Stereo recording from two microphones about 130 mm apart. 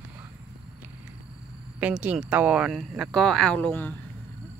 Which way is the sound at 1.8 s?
10° right (ahead or behind).